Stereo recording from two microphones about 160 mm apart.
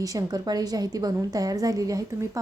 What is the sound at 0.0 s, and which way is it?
A woman's voice, 20° right (ahead or behind).